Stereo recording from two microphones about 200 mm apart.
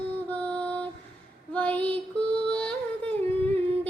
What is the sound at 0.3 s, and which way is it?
Music, 5° left (ahead or behind).